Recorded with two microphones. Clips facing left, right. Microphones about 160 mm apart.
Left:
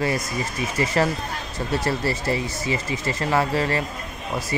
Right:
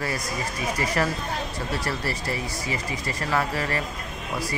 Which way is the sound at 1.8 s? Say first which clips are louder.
Left 5 dB; 25° left (ahead or behind).